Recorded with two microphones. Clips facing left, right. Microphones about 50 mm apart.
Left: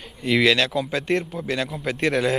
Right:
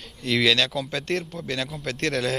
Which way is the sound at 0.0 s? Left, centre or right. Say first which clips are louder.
Left 3 dB; centre.